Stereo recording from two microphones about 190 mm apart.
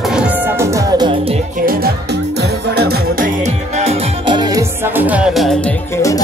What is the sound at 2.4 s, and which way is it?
Music, 60° right (ahead or behind).